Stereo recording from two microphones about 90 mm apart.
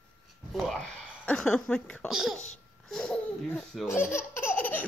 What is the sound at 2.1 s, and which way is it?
Speech, 5° right (ahead or behind).